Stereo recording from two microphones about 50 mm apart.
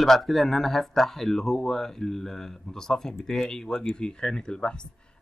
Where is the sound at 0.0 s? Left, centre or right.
Centre.